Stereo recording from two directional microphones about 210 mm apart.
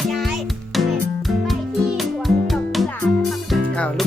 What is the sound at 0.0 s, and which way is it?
Music, centre (ahead or behind).